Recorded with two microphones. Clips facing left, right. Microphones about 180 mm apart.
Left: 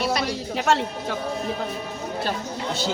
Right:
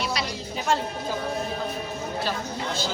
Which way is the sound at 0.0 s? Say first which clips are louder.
Left 5 dB; 50° left (ahead or behind).